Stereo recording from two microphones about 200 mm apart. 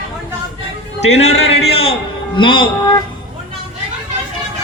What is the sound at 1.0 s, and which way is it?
A man's voice, 35° left (ahead or behind).